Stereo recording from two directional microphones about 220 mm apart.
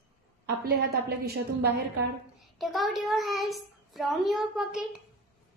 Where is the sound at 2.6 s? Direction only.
Centre (ahead or behind).